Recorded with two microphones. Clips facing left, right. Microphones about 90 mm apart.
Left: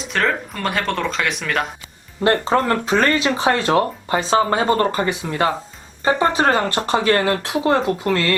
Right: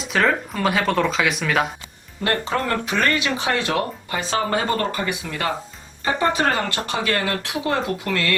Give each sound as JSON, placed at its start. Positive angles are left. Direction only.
{"t": 0.0, "sound": "speech", "side_deg": 0}
{"t": 2.2, "sound": "speech", "side_deg": 25}